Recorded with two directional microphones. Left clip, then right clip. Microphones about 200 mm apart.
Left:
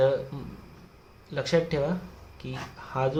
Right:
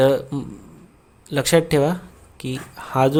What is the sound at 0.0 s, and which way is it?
Speech, 55° right (ahead or behind).